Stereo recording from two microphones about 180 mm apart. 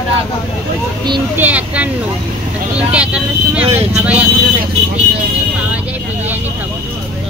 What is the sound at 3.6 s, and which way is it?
Speech, 35° right (ahead or behind).